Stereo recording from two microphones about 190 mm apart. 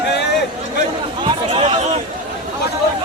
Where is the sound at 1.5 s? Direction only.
30° right (ahead or behind).